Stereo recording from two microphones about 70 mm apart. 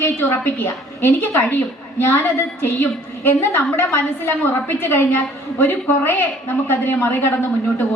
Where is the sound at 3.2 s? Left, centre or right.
Left.